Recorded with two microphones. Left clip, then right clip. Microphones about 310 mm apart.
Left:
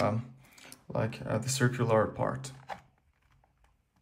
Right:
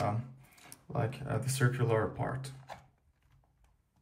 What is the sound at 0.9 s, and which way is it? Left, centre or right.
Speech, centre.